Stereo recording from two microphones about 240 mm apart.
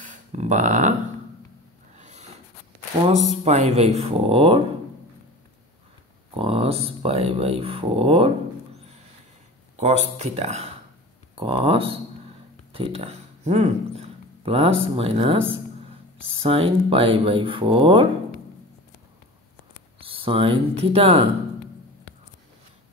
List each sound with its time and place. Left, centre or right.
0.0 s speech: right
2.0 s snort: right
3.1 s speech: right
6.3 s speech: right
9.8 s speech: right
20.0 s speech: right